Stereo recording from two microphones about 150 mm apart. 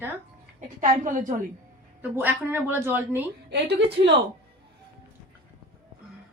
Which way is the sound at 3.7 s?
90° right.